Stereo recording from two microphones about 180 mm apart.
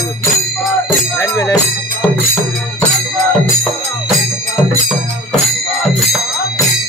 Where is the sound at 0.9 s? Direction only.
10° left (ahead or behind).